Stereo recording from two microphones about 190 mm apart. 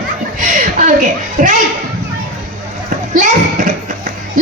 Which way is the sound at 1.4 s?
45° right (ahead or behind).